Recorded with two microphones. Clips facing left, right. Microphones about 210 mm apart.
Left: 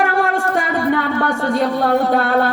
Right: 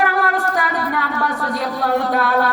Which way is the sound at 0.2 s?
25° left (ahead or behind).